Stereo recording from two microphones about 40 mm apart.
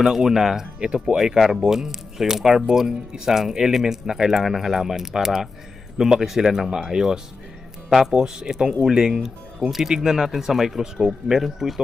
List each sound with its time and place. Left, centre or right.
0.0 s speech: centre
8.1 s speech: centre